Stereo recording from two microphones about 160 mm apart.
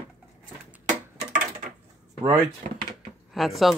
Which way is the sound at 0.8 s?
55° right (ahead or behind).